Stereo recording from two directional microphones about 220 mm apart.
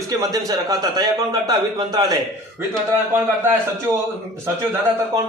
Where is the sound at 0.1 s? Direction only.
15° right (ahead or behind).